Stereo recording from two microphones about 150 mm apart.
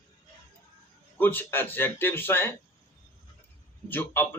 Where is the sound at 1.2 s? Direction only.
15° left (ahead or behind).